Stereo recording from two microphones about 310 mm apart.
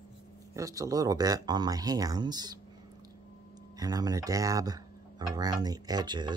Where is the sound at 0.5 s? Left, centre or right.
Centre.